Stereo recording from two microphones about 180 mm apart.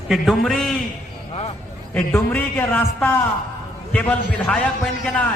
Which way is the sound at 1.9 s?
10° left (ahead or behind).